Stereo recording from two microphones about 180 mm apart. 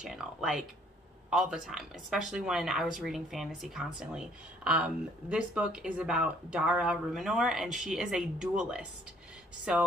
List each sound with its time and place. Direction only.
0.0 s speech: centre (ahead or behind)